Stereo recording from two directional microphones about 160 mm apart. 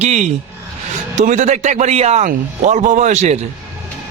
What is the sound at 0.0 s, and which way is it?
A man's voice, 45° right (ahead or behind).